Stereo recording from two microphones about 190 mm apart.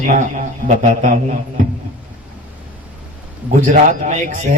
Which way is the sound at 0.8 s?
40° right (ahead or behind).